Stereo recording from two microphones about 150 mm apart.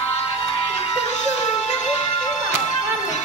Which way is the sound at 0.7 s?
45° left (ahead or behind).